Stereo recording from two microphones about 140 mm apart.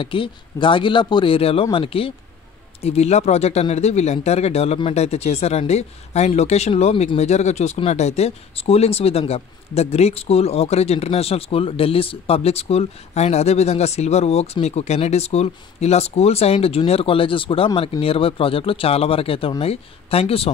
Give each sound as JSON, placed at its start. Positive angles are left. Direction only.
{"t": 0.0, "sound": "a man's voice", "side_deg": 35}